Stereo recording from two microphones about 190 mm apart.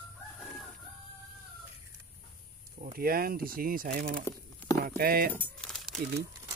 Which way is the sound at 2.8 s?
50° right (ahead or behind).